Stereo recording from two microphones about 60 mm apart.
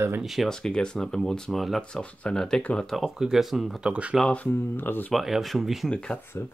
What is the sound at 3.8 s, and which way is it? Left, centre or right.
Speech, centre.